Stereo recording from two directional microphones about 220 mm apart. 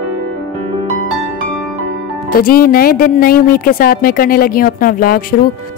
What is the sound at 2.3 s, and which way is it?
Speech, 40° left (ahead or behind).